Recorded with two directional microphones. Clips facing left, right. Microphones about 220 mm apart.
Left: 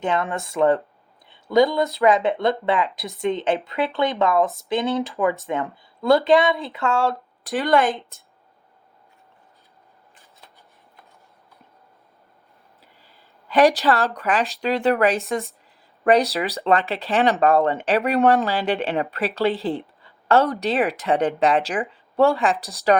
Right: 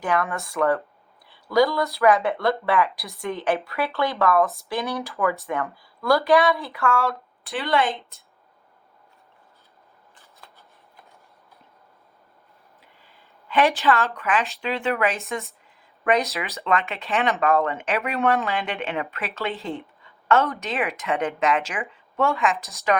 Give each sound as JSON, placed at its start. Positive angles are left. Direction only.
{"t": 0.0, "sound": "speech", "side_deg": 25}
{"t": 7.4, "sound": "a woman's voice", "side_deg": 45}
{"t": 13.5, "sound": "speech", "side_deg": 40}